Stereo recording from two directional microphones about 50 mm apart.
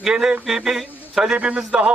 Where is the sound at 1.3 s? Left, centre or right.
Right.